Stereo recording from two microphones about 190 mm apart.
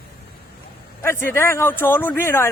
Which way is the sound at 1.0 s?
15° left (ahead or behind).